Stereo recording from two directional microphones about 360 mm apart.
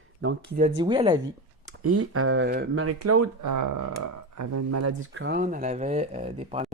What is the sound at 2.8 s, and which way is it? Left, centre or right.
Speech, right.